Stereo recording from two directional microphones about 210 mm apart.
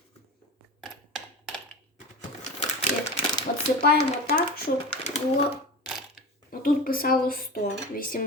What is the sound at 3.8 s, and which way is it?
Speech, 50° left (ahead or behind).